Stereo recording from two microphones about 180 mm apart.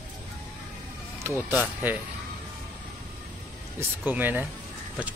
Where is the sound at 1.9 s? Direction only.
10° right (ahead or behind).